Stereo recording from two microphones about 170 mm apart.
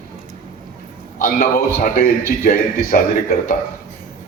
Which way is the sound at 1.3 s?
55° left (ahead or behind).